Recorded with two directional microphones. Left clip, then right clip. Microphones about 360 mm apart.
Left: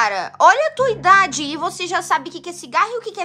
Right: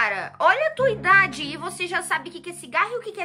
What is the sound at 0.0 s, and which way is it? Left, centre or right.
Speech, centre.